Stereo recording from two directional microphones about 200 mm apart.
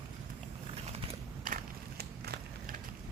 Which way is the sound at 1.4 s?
50° right (ahead or behind).